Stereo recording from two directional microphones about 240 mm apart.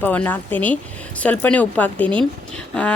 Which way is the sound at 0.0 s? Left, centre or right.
Centre.